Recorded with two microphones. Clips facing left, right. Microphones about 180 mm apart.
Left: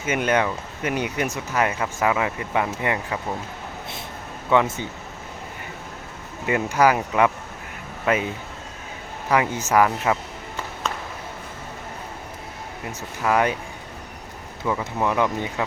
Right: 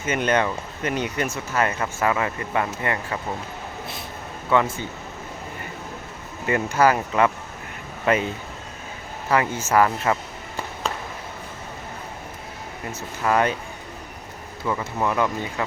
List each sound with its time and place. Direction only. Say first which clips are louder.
0.0 s speech: even; 10° left (ahead or behind)
4.5 s speech: left 1 dB; 15° left (ahead or behind)
6.4 s speech: even; 10° left (ahead or behind)
9.3 s speech: even; 15° left (ahead or behind)
12.9 s speech: even; 10° left (ahead or behind)
14.7 s speech: left 1 dB; 5° left (ahead or behind)